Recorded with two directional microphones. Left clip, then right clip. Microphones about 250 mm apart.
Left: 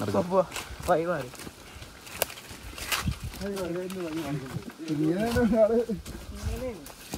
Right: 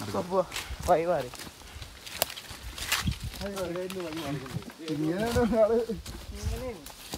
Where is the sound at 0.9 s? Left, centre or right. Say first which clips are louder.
Right 1 dB; right.